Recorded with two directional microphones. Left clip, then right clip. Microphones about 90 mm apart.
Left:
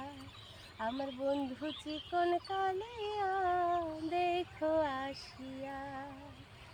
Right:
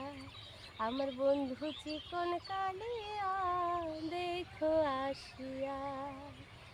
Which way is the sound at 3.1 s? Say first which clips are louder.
Left 3 dB; 25° right (ahead or behind).